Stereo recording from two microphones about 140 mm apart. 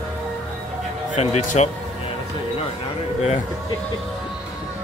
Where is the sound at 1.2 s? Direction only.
50° left (ahead or behind).